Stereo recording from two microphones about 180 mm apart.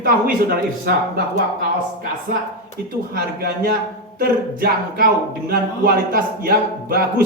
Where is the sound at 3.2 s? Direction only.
60° right (ahead or behind).